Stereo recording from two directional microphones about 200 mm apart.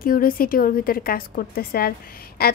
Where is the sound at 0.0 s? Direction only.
45° left (ahead or behind).